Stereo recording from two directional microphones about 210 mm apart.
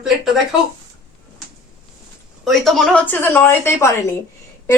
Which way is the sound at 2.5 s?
Centre (ahead or behind).